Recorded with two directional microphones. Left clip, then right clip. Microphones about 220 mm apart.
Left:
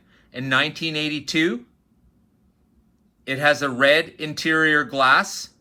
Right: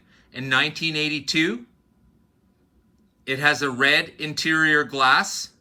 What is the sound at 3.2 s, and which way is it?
Speech, 5° right (ahead or behind).